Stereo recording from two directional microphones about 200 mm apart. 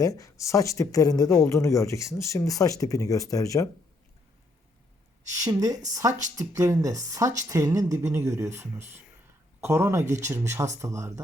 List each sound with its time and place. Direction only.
0.0 s speech: 15° left (ahead or behind)
5.4 s a woman's voice: 20° right (ahead or behind)